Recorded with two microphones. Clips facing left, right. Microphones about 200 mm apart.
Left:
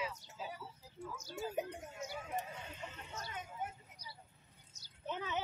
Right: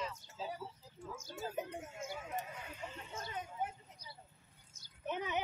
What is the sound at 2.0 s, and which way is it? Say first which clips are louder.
Speech: even; 50° right (ahead or behind).